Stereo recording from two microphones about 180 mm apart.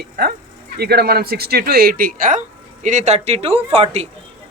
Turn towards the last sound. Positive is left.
turn(degrees=-35)  # may be behind; listen again after turning